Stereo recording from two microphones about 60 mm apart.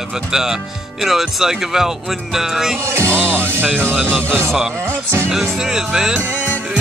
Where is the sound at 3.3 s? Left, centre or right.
Right.